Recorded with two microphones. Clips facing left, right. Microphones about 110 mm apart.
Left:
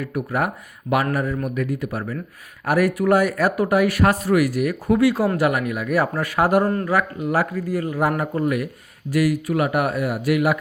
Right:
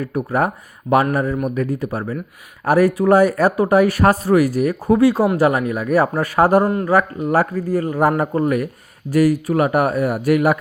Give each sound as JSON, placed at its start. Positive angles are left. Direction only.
{"t": 0.0, "sound": "speech", "side_deg": -35}